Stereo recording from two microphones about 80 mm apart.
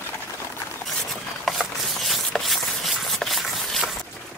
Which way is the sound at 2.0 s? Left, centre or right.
Centre.